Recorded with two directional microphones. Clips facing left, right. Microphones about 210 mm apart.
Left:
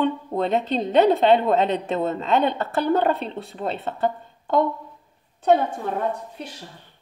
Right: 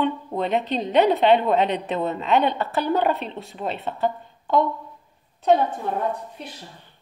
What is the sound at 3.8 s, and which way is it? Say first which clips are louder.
A woman's voice: even; 50° left (ahead or behind).